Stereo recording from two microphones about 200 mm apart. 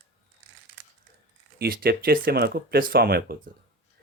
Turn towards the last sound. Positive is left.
turn(degrees=-50)  # may be behind; listen again after turning